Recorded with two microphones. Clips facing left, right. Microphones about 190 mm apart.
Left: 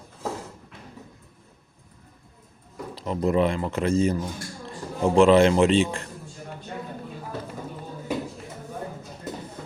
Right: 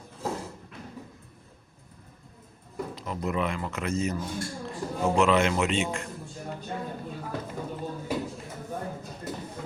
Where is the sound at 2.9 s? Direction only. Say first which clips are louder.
Left 9 dB; 30° left (ahead or behind).